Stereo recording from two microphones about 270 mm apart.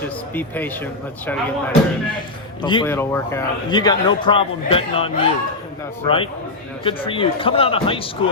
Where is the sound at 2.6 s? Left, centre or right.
Centre.